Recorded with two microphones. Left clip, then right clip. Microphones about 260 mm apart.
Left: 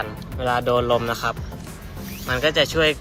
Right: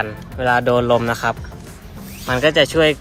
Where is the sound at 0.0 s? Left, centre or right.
Right.